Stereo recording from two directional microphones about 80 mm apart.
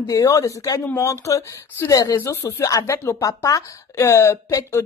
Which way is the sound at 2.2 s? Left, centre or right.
Left.